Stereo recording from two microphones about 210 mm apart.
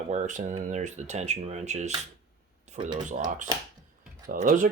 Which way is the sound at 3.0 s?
35° right (ahead or behind).